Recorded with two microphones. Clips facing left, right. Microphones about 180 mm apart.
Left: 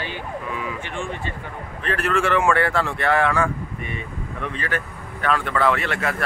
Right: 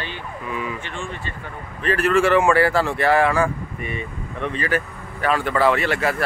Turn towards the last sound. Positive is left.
turn(degrees=-5)  # may be behind; listen again after turning